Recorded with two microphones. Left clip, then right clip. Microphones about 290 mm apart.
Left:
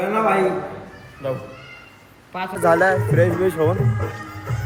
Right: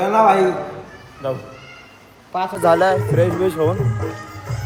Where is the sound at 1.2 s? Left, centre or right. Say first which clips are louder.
Right 2 dB; centre.